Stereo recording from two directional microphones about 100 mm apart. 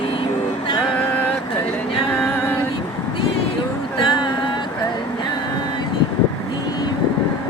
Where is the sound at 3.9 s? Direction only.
50° left (ahead or behind).